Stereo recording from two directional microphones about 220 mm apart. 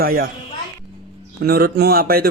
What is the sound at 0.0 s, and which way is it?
Speech, 40° right (ahead or behind).